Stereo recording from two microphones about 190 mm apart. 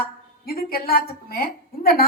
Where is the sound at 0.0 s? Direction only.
50° left (ahead or behind).